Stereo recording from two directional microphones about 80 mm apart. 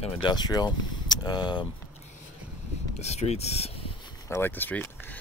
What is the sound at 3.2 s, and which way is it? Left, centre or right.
Speech, left.